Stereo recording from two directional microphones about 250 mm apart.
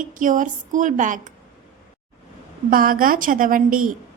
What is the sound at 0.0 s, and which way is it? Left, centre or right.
A woman's voice, right.